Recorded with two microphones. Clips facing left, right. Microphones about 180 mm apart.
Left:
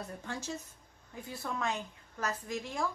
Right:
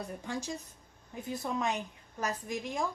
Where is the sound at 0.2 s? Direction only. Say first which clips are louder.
Right 2 dB; 15° right (ahead or behind).